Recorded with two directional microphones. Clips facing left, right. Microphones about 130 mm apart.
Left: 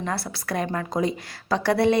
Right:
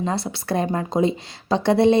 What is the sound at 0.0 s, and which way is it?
A woman's voice, 20° right (ahead or behind).